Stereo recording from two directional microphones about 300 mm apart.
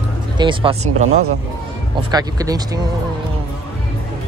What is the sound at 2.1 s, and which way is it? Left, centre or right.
Speech, centre.